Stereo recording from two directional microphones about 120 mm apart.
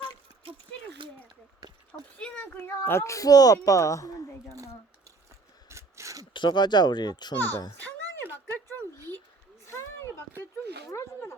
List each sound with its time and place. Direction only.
2.1 s speech: 10° left (ahead or behind); by 4.3 s 30° left (ahead or behind)
5.6 s a sound: 25° right (ahead or behind)
6.3 s speech: 40° left (ahead or behind)
7.3 s a child's voice: 20° left (ahead or behind)
7.8 s music: 15° left (ahead or behind)
9.6 s a sound: 20° left (ahead or behind)